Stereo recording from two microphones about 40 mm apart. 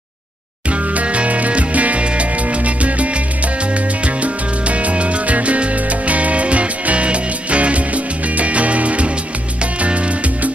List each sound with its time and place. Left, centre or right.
0.7 s music: right